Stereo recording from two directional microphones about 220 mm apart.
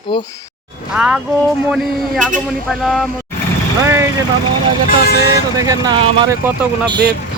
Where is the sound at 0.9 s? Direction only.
5° right (ahead or behind).